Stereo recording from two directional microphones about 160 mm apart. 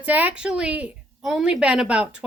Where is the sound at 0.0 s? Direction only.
10° right (ahead or behind).